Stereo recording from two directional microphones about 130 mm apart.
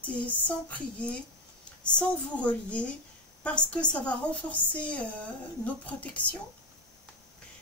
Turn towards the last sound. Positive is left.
turn(degrees=10)  # may be behind; listen again after turning